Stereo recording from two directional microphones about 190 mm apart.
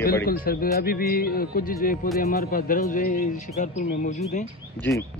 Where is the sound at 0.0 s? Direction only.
55° left (ahead or behind).